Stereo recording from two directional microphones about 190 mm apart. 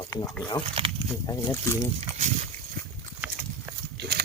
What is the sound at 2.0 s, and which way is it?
Speech, 35° right (ahead or behind).